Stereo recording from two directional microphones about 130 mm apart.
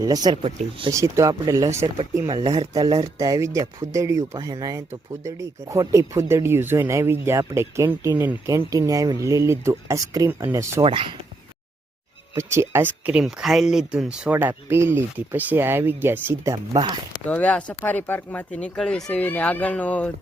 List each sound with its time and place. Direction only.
0.0 s speech: 30° right (ahead or behind)
10.8 s speech: 45° right (ahead or behind)
12.4 s speech: 20° right (ahead or behind)
17.2 s speech: 10° left (ahead or behind)